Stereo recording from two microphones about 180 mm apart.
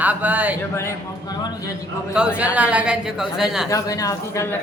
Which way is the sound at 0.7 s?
15° left (ahead or behind).